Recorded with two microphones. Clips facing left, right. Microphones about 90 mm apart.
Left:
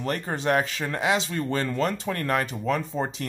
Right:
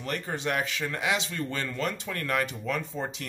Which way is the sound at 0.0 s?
40° left (ahead or behind).